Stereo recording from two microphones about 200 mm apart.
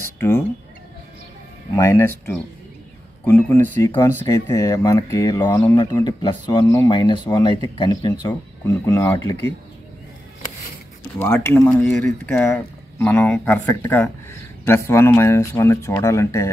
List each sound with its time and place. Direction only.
1.8 s speech: 15° left (ahead or behind)
3.8 s speech: 20° left (ahead or behind)
11.1 s speech: 10° left (ahead or behind)